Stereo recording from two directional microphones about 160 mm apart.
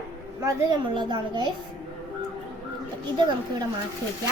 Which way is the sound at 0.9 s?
30° right (ahead or behind).